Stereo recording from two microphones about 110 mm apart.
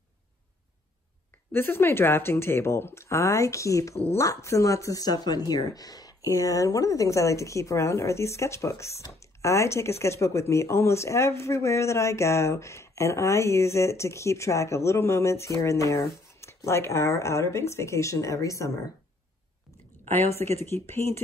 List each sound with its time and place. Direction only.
1.5 s speech: 20° left (ahead or behind)
3.9 s speech: 70° left (ahead or behind)
4.2 s speech: 30° left (ahead or behind)
20.6 s speech: 20° left (ahead or behind)